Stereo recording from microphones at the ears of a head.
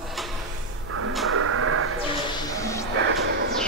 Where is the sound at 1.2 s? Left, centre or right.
Right.